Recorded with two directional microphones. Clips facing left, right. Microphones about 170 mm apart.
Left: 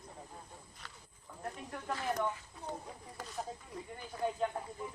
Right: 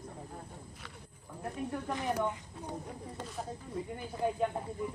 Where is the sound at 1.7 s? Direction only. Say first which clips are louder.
Right 2 dB; 15° right (ahead or behind).